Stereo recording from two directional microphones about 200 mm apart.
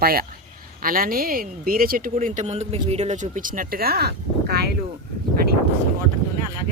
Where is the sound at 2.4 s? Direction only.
35° right (ahead or behind); by 4.7 s 55° right (ahead or behind).